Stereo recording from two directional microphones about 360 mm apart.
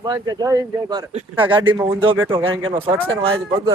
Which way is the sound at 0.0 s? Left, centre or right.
Centre.